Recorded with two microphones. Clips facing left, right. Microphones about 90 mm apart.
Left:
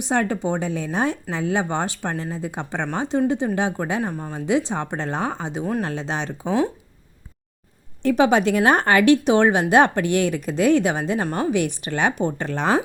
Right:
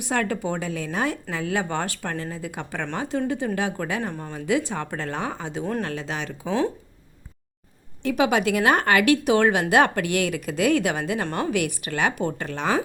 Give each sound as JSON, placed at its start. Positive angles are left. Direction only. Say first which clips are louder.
{"t": 0.0, "sound": "a woman's voice", "louder": "left 3 dB", "side_deg": 25}
{"t": 6.4, "sound": "speech", "louder": "left 2 dB", "side_deg": 15}
{"t": 8.0, "sound": "a woman's voice", "louder": "left 4 dB", "side_deg": 30}